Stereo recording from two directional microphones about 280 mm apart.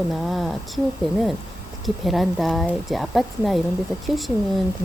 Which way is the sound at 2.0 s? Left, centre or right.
Centre.